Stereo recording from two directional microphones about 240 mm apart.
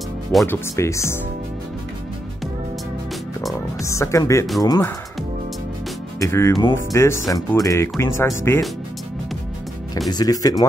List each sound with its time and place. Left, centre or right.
0.3 s speech: centre
0.7 s speech: centre
3.8 s speech: centre
6.1 s speech: centre
10.0 s speech: centre